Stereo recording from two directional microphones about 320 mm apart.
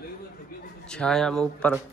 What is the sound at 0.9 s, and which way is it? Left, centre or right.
Speech, centre.